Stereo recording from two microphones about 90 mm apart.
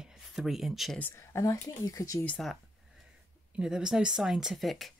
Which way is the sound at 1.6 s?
40° left (ahead or behind).